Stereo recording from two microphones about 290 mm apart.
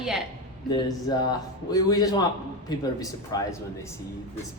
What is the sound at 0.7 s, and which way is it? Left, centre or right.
Speech, centre.